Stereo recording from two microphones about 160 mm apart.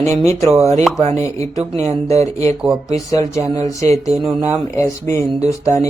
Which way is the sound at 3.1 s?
20° left (ahead or behind).